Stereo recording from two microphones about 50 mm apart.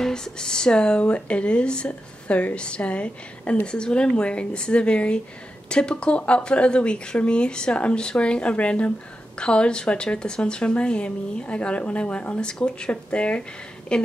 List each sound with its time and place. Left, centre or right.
0.0 s a woman's voice: centre